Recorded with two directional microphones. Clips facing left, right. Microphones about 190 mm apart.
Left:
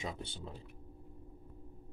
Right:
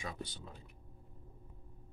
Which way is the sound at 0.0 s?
25° left (ahead or behind).